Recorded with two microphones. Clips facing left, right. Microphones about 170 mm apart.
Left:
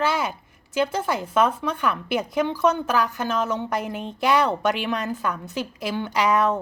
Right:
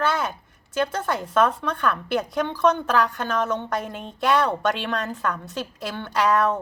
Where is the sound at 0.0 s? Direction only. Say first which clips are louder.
Even; 10° left (ahead or behind).